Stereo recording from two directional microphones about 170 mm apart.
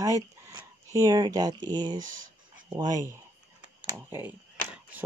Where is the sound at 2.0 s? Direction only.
50° right (ahead or behind).